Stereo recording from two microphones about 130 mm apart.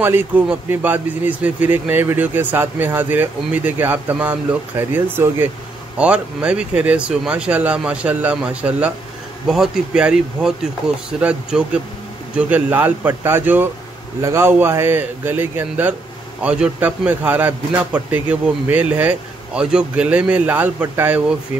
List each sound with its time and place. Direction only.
0.0 s speech: 15° right (ahead or behind)